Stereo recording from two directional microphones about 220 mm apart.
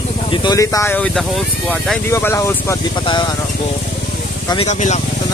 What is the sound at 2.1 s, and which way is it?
Speech, 10° left (ahead or behind).